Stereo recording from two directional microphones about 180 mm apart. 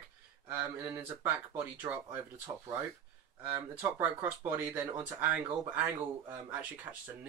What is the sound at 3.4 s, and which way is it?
Speech, 10° right (ahead or behind).